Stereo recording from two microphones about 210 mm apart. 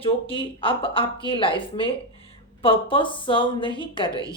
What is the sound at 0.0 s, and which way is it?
A woman's voice, 25° left (ahead or behind).